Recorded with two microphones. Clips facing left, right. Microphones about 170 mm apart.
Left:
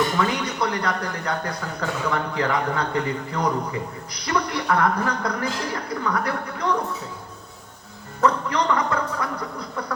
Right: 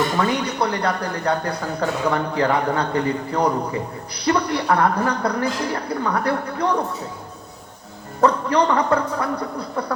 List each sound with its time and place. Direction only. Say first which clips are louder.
0.2 s speech: right 3 dB; 35° right (ahead or behind)
8.2 s speech: right 4 dB; 35° right (ahead or behind)